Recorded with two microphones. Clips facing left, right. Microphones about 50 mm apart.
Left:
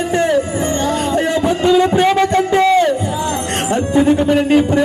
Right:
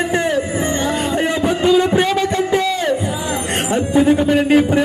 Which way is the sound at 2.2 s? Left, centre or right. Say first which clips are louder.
Left 4 dB; left.